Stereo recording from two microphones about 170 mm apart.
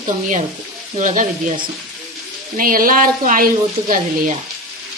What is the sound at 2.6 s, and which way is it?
Speech, 55° right (ahead or behind).